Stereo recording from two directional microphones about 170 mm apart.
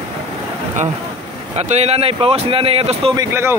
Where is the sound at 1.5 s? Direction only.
40° right (ahead or behind).